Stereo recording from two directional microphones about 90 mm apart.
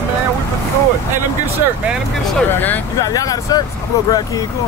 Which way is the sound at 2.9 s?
45° left (ahead or behind).